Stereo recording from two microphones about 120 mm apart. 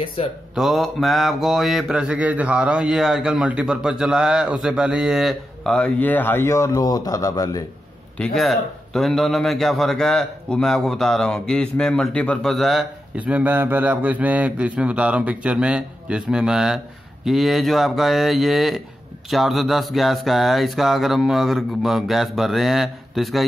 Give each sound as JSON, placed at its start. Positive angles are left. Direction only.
{"t": 0.0, "sound": "speech", "side_deg": 45}
{"t": 0.6, "sound": "mantra", "side_deg": 0}
{"t": 8.2, "sound": "mantra", "side_deg": 0}
{"t": 13.1, "sound": "a man's voice", "side_deg": -10}
{"t": 19.3, "sound": "mantra", "side_deg": 0}